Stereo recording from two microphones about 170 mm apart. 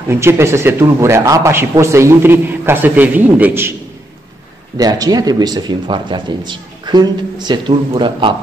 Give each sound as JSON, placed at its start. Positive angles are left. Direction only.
{"t": 0.1, "sound": "speech", "side_deg": -15}
{"t": 4.7, "sound": "speech", "side_deg": -20}